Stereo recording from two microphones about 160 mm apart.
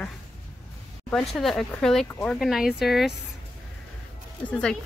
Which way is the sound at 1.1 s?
Centre (ahead or behind).